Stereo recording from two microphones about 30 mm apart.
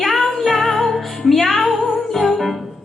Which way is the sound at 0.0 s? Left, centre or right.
Centre.